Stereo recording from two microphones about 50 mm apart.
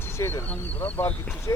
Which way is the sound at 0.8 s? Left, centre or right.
Left.